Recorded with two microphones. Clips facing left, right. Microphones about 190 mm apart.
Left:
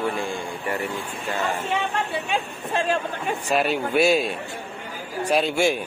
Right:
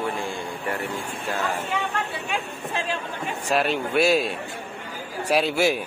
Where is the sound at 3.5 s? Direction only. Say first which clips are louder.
Even; centre (ahead or behind).